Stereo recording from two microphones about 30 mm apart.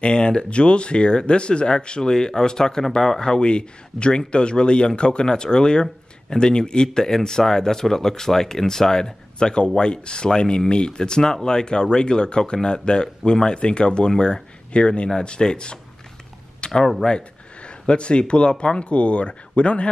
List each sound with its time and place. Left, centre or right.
0.0 s speech: left; by 9.1 s centre
9.4 s speech: left
14.7 s speech: left
16.6 s a sound: left
17.0 s speech: left
17.6 s speech: left